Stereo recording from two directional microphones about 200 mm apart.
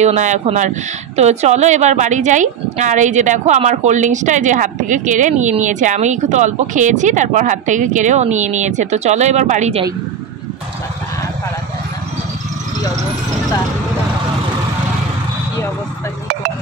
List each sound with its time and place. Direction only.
0.0 s a woman's voice: 35° right (ahead or behind)